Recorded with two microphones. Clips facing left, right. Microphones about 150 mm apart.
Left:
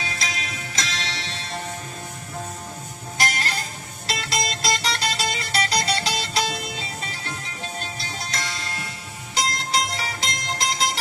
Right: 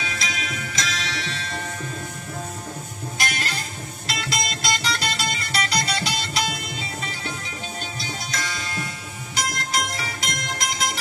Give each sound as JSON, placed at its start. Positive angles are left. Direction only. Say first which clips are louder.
{"t": 0.0, "sound": "music", "louder": "right 1 dB", "side_deg": 35}
{"t": 3.2, "sound": "music", "louder": "left 3 dB", "side_deg": 35}
{"t": 8.3, "sound": "music", "louder": "right 1 dB", "side_deg": 30}